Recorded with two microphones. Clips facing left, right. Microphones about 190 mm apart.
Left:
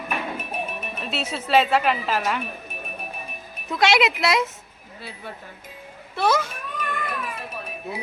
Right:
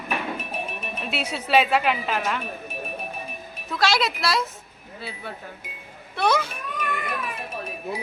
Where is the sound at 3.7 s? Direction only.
20° left (ahead or behind).